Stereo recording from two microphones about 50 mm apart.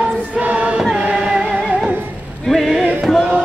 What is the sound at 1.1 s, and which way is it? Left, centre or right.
Music, centre.